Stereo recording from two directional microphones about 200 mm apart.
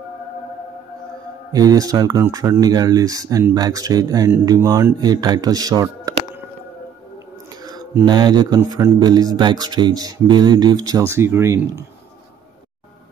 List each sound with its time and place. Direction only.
1.5 s speech: 20° right (ahead or behind)
7.6 s speech: 20° right (ahead or behind)